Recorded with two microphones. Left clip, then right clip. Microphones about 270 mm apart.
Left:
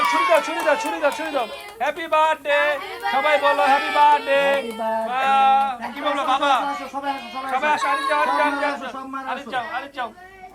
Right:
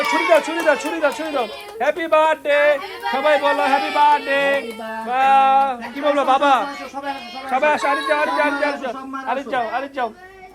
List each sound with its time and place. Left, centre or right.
0.1 s speech: centre